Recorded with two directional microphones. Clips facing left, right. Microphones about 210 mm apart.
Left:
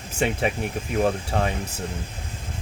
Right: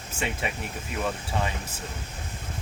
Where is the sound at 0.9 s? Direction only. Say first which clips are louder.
Left 7 dB; 60° left (ahead or behind).